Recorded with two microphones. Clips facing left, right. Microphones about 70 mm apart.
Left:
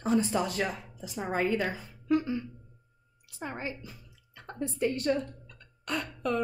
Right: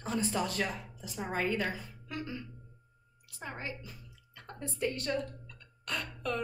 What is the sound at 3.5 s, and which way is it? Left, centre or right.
A woman's voice, left.